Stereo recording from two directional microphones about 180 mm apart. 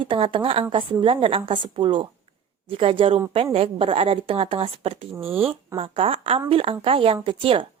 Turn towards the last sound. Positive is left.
turn(degrees=-30)  # may be behind; listen again after turning